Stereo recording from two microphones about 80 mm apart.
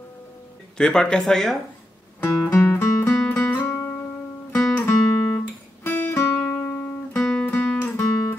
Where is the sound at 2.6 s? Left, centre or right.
Left.